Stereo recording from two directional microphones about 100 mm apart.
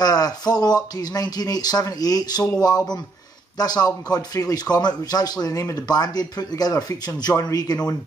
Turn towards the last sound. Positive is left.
turn(degrees=40)  # may be behind; listen again after turning